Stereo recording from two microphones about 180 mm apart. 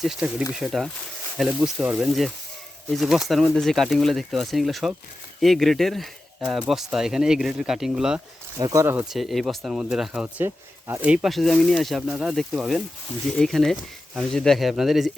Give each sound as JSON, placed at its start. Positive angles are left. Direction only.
{"t": 0.0, "sound": "speech", "side_deg": -5}
{"t": 8.5, "sound": "speech", "side_deg": -20}
{"t": 9.0, "sound": "speech", "side_deg": 0}